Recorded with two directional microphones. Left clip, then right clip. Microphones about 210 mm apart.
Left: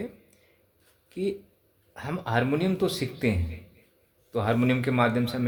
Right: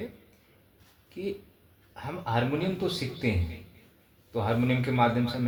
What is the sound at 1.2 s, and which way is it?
Speech, 55° left (ahead or behind).